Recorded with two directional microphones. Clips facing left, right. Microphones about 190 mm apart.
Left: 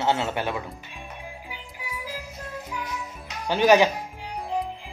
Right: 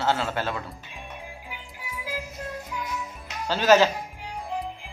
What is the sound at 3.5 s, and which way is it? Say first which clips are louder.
Speech: left 1 dB; 15° left (ahead or behind).